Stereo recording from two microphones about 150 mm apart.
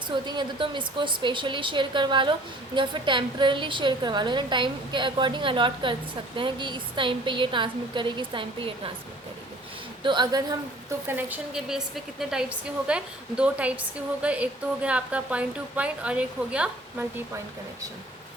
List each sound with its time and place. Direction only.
0.1 s a woman's voice: 30° right (ahead or behind)
10.0 s a woman's voice: 30° right (ahead or behind)
11.1 s speech: 5° right (ahead or behind)